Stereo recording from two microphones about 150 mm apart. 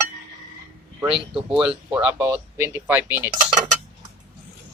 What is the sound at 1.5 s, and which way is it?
Speech, 5° right (ahead or behind).